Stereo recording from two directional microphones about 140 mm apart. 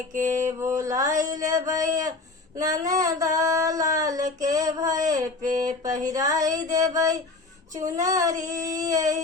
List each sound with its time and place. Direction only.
0.1 s mantra: 65° right (ahead or behind)
0.4 s child singing: 20° right (ahead or behind)
1.2 s a sound: 25° right (ahead or behind)
4.4 s child singing: 25° right (ahead or behind)
5.4 s a sound: 65° right (ahead or behind)
6.0 s child singing: 25° right (ahead or behind)